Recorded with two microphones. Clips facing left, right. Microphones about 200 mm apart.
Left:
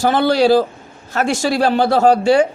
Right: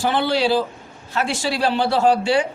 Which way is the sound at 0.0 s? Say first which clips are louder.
Left 6 dB; 40° left (ahead or behind).